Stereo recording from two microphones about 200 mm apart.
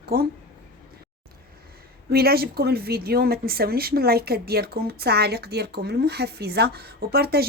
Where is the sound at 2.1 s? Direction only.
50° right (ahead or behind).